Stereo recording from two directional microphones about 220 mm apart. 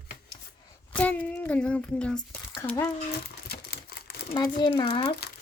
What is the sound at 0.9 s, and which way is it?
A child's voice, 5° left (ahead or behind).